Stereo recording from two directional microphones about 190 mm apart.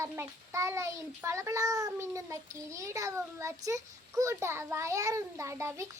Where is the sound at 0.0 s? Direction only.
15° right (ahead or behind).